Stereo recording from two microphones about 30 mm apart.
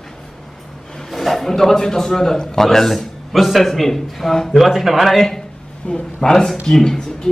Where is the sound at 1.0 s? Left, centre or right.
Centre.